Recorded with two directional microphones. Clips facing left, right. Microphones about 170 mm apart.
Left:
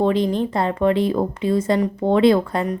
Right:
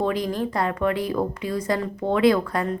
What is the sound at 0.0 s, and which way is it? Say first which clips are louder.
A woman's voice: left 5 dB; 25° left (ahead or behind).